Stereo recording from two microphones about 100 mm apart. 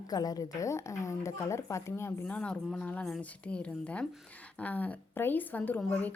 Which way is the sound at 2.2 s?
10° left (ahead or behind).